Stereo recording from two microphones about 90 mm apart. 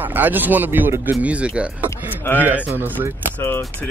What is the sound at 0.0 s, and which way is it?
Speech, 20° right (ahead or behind).